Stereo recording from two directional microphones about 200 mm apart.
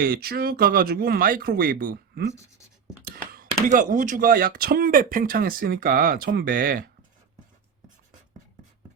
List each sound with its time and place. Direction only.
0.0 s speech: 50° right (ahead or behind)
3.3 s speech: 40° right (ahead or behind)